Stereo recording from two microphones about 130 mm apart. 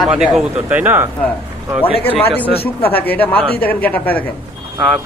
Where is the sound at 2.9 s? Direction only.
15° left (ahead or behind).